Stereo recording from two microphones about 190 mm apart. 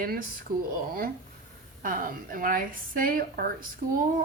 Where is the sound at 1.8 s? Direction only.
45° right (ahead or behind).